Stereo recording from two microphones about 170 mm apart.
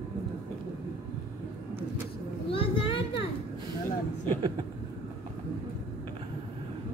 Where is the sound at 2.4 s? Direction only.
30° left (ahead or behind).